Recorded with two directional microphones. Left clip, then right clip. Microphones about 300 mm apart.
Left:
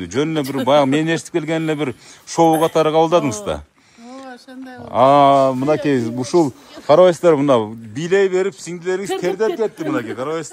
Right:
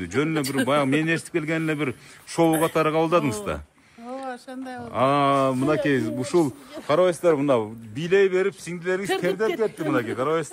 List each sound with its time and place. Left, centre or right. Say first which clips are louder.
0.0 s speech: left 5 dB; centre
4.2 s a sound: even; right
4.9 s speech: left 9 dB; centre